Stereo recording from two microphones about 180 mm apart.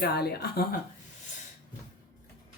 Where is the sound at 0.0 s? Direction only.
60° left (ahead or behind).